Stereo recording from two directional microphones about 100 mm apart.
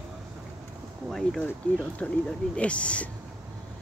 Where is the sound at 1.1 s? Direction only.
5° left (ahead or behind).